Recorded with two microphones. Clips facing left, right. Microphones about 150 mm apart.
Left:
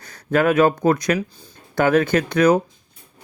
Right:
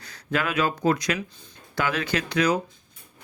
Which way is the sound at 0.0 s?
50° left (ahead or behind).